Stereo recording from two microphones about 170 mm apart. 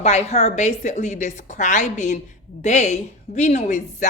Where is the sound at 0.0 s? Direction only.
40° left (ahead or behind).